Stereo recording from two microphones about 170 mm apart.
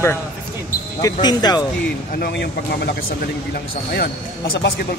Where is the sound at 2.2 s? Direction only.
75° left (ahead or behind).